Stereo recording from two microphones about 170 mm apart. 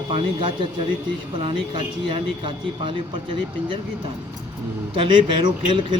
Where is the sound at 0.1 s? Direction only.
30° right (ahead or behind).